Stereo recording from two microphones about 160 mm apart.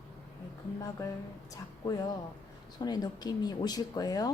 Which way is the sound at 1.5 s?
20° left (ahead or behind).